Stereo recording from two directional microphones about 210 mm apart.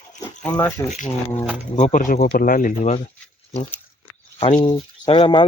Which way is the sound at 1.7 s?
35° left (ahead or behind).